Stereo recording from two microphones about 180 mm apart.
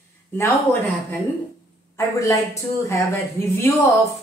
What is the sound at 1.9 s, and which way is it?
A woman's voice, 15° left (ahead or behind).